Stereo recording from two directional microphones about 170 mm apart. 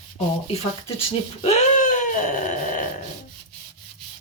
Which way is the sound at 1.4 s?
40° left (ahead or behind).